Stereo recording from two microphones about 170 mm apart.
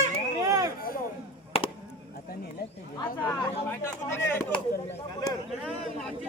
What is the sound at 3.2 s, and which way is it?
Speech, 10° left (ahead or behind).